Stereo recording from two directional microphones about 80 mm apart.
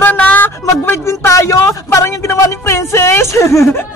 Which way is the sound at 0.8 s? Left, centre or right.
Left.